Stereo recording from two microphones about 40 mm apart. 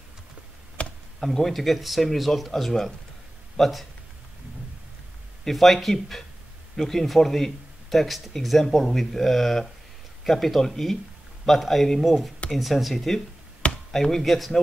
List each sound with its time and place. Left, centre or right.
0.8 s chop: left
1.2 s speech: centre
5.4 s speech: centre